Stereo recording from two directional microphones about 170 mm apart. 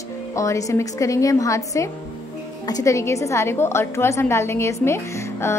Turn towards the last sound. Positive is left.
turn(degrees=15)  # may be behind; listen again after turning